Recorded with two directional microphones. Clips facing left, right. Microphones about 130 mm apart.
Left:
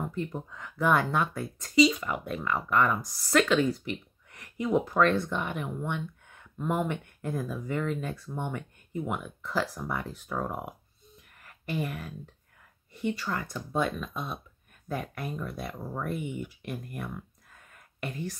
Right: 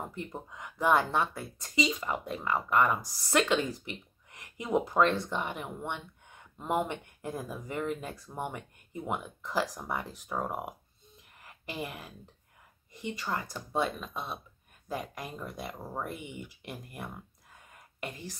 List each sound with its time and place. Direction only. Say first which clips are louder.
0.1 s speech: left 6 dB; 20° right (ahead or behind)
2.0 s speech: left 1 dB; 25° right (ahead or behind)
2.3 s speech: left 1 dB; 15° right (ahead or behind)
13.1 s speech: left 2 dB; 15° right (ahead or behind)
16.7 s a sound: left 4 dB; 10° right (ahead or behind)